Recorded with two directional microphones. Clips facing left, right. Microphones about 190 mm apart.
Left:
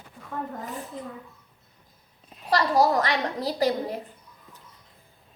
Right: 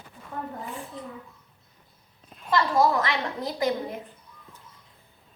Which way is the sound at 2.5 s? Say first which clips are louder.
Left 1 dB; 35° left (ahead or behind).